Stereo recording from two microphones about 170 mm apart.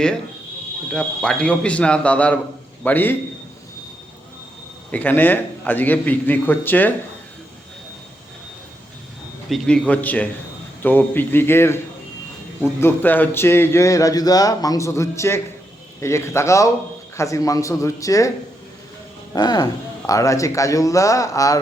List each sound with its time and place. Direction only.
0.9 s speech: 5° left (ahead or behind)
4.9 s speech: 10° left (ahead or behind)
9.5 s speech: 5° left (ahead or behind)
19.3 s speech: 25° left (ahead or behind)